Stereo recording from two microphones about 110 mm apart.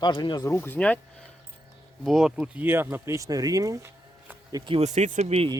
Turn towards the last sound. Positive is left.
turn(degrees=-90)